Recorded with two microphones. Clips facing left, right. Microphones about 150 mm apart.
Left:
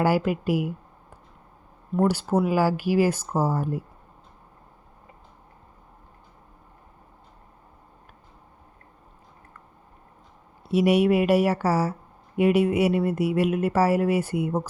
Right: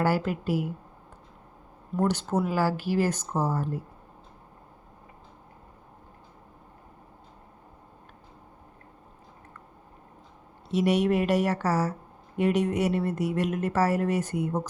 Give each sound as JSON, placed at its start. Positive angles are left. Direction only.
{"t": 0.0, "sound": "speech", "side_deg": 10}
{"t": 1.9, "sound": "speech", "side_deg": 5}
{"t": 10.7, "sound": "speech", "side_deg": 10}